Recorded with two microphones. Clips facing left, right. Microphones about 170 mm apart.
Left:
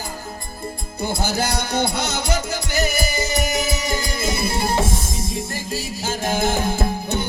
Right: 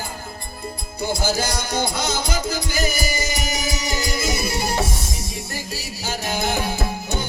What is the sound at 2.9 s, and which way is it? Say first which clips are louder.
Music: left 2 dB; 60° left (ahead or behind).